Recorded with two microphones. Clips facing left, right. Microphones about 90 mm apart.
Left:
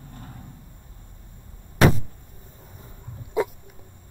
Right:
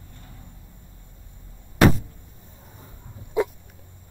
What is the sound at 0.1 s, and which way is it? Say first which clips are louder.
Vehicle: left 7 dB; 45° left (ahead or behind).